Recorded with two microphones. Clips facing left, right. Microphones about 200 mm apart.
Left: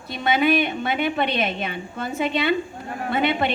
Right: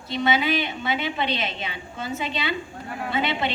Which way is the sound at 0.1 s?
55° left (ahead or behind).